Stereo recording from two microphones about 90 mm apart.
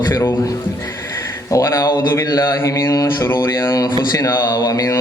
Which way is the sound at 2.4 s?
30° left (ahead or behind).